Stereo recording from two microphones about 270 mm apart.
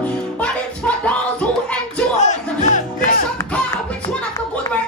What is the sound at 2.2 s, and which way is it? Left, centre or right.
Music, left.